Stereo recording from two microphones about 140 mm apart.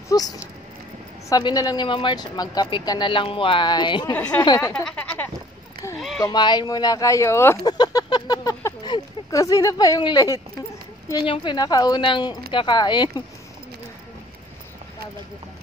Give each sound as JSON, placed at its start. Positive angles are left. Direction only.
{"t": 0.1, "sound": "speech", "side_deg": 30}
{"t": 1.3, "sound": "speech", "side_deg": 25}
{"t": 4.1, "sound": "speech", "side_deg": 10}
{"t": 4.6, "sound": "speech", "side_deg": 20}
{"t": 4.8, "sound": "speech", "side_deg": 10}
{"t": 5.9, "sound": "a sound", "side_deg": 0}
{"t": 6.2, "sound": "speech", "side_deg": 30}